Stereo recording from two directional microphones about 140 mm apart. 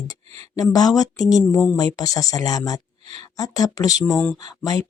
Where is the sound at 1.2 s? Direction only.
Centre (ahead or behind).